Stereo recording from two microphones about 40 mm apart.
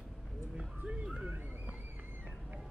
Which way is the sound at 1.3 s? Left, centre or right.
Right.